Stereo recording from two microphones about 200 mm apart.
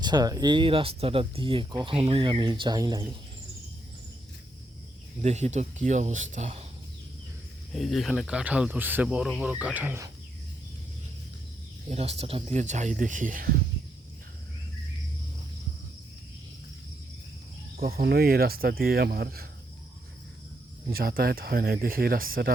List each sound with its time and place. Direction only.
0.0 s speech: 20° right (ahead or behind)
5.2 s speech: 35° right (ahead or behind)
7.7 s speech: centre (ahead or behind)
11.9 s speech: 30° right (ahead or behind)
17.7 s speech: 50° right (ahead or behind)
20.9 s speech: 50° right (ahead or behind)